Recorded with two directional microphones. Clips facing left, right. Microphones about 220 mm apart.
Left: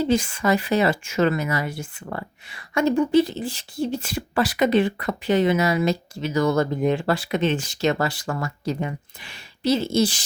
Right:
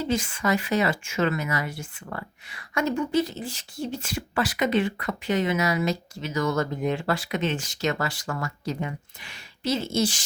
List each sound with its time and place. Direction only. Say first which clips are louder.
0.0 s speech: left 5 dB; 35° left (ahead or behind)